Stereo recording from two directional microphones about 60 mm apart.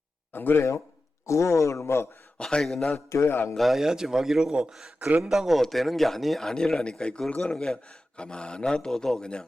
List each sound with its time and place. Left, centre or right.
0.3 s speech: left
1.3 s a man's voice: left
1.8 s a man's voice: left
2.4 s speech: centre
3.1 s a man's voice: left
3.5 s speech: centre
4.9 s a man's voice: right
5.3 s speech: centre